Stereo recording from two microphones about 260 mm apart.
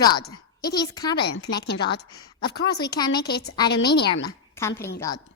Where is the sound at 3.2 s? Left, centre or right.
Left.